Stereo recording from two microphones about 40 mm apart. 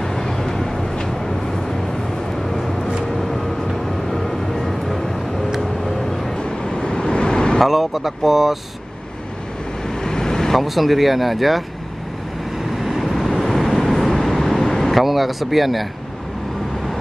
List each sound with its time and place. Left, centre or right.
0.0 s vehicle: centre
2.4 s vehicle: centre
6.3 s vehicle: left
7.6 s speech: centre
9.8 s vehicle: centre
10.6 s speech: centre
12.7 s vehicle: centre
14.9 s speech: centre